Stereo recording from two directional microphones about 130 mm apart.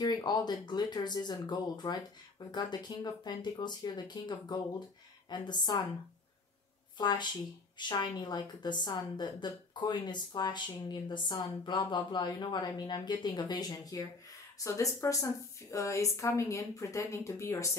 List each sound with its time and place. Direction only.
0.0 s a woman's voice: 35° left (ahead or behind)
7.0 s a woman's voice: 35° left (ahead or behind)